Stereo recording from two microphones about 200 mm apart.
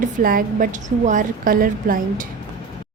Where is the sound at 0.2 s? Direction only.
45° right (ahead or behind).